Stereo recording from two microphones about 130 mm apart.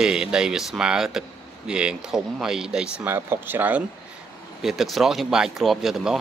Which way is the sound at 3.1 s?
15° right (ahead or behind).